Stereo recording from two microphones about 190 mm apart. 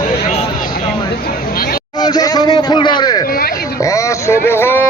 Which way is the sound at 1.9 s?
20° left (ahead or behind).